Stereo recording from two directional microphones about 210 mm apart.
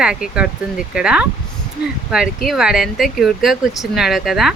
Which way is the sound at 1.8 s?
50° left (ahead or behind).